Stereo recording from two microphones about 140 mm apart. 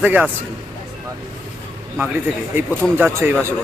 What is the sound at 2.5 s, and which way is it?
Speech, 15° right (ahead or behind).